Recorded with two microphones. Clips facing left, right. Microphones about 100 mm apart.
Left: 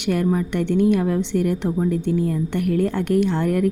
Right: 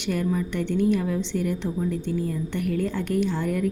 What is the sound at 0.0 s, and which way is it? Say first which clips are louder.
A woman's voice: left 5 dB; 60° left (ahead or behind).